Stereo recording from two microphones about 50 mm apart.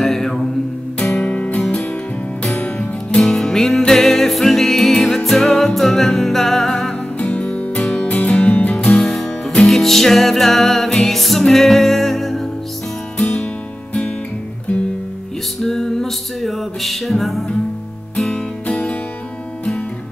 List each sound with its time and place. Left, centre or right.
0.0 s mantra: centre
0.9 s music: left
1.6 s music: centre
2.4 s music: left
7.2 s music: left
8.9 s music: centre
15.6 s music: centre
18.7 s music: left